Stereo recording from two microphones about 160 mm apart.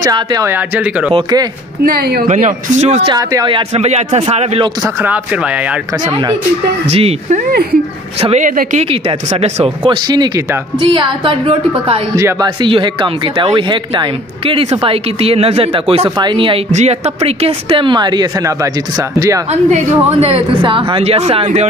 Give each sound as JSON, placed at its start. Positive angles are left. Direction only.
{"t": 0.0, "sound": "speech", "side_deg": -25}
{"t": 0.5, "sound": "speech", "side_deg": -10}
{"t": 1.1, "sound": "speech", "side_deg": -25}
{"t": 1.9, "sound": "a woman's voice", "side_deg": -75}
{"t": 2.2, "sound": "speech", "side_deg": -50}
{"t": 3.1, "sound": "speech", "side_deg": -20}
{"t": 4.8, "sound": "speech", "side_deg": -10}
{"t": 6.9, "sound": "speech", "side_deg": -40}
{"t": 8.5, "sound": "speech", "side_deg": -55}
{"t": 8.9, "sound": "speech", "side_deg": -40}
{"t": 10.0, "sound": "speech", "side_deg": -25}
{"t": 12.2, "sound": "speech", "side_deg": -20}
{"t": 16.7, "sound": "speech", "side_deg": -45}
{"t": 19.5, "sound": "speech", "side_deg": -40}